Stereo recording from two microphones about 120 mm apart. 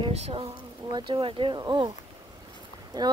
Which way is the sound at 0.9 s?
40° right (ahead or behind).